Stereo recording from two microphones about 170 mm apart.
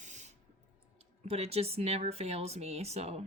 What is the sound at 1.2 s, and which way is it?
Speech, 35° right (ahead or behind).